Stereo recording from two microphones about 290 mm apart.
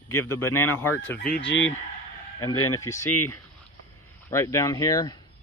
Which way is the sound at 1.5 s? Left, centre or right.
Left.